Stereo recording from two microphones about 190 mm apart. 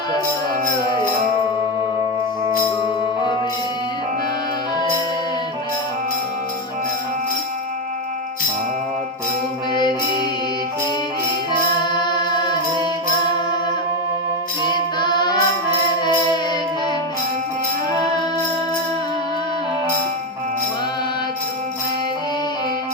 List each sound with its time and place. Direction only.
11.9 s chant: 20° left (ahead or behind)
14.6 s music: 25° left (ahead or behind)